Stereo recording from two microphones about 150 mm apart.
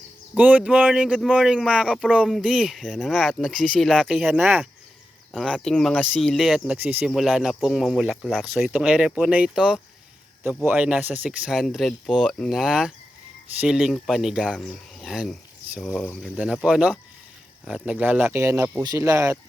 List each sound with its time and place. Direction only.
0.3 s speech: 10° right (ahead or behind)
4.3 s speech: 10° right (ahead or behind)
5.3 s speech: centre (ahead or behind); by 19.4 s 20° right (ahead or behind)